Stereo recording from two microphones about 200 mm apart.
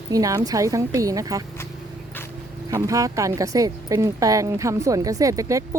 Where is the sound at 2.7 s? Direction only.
15° right (ahead or behind).